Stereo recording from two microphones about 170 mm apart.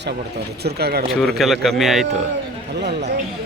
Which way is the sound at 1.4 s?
Centre (ahead or behind).